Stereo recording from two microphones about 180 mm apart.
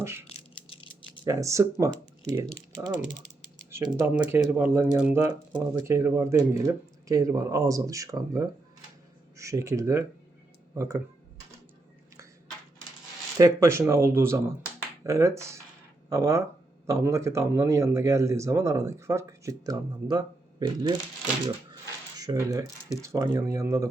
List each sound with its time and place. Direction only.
0.0 s a sound: 15° right (ahead or behind)
0.3 s a sound: 35° left (ahead or behind)
1.2 s speech: 20° right (ahead or behind)
3.7 s speech: 15° right (ahead or behind)
13.4 s speech: 15° right (ahead or behind)
22.2 s speech: 20° right (ahead or behind)